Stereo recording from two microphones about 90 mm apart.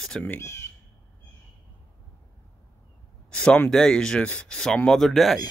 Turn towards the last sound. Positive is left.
turn(degrees=0)  # may be behind; listen again after turning